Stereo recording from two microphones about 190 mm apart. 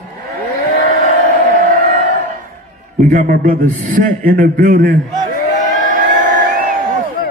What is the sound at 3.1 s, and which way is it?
A man's voice, 45° right (ahead or behind).